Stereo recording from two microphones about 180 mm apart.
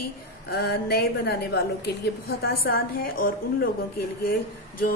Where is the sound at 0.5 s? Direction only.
60° left (ahead or behind).